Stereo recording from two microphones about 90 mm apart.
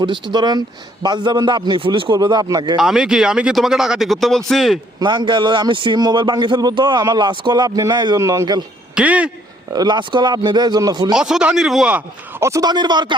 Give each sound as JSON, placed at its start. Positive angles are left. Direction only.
{"t": 0.0, "sound": "a man's voice", "side_deg": -60}
{"t": 2.1, "sound": "speech", "side_deg": -45}
{"t": 2.7, "sound": "speech", "side_deg": -5}
{"t": 4.9, "sound": "a man's voice", "side_deg": -55}
{"t": 8.2, "sound": "speech", "side_deg": -35}
{"t": 9.0, "sound": "speech", "side_deg": -15}
{"t": 9.7, "sound": "speech", "side_deg": -55}
{"t": 11.1, "sound": "speech", "side_deg": -10}
{"t": 12.4, "sound": "speech", "side_deg": -35}
{"t": 12.6, "sound": "speech", "side_deg": -55}